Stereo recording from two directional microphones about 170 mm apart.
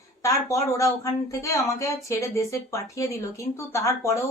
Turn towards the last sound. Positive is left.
turn(degrees=15)  # may be behind; listen again after turning